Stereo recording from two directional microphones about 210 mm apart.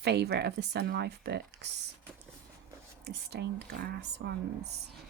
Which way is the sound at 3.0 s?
50° right (ahead or behind).